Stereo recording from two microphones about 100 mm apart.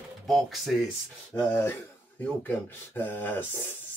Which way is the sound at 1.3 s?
20° left (ahead or behind).